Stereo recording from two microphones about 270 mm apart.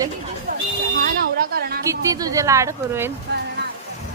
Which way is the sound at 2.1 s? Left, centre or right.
Centre.